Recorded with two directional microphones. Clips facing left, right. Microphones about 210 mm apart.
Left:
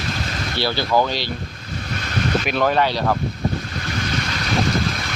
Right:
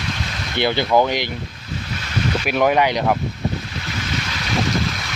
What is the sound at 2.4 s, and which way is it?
Speech, 10° right (ahead or behind).